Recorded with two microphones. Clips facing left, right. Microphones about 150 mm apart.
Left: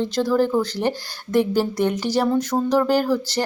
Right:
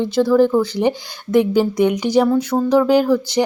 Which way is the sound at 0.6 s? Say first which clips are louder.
Right 5 dB; 15° right (ahead or behind).